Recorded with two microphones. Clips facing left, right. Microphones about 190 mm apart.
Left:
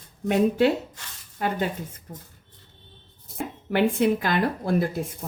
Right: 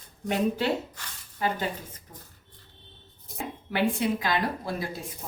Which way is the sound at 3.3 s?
55° left (ahead or behind).